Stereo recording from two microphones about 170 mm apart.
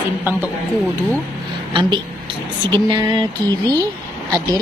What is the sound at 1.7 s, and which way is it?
A woman's voice, 30° right (ahead or behind).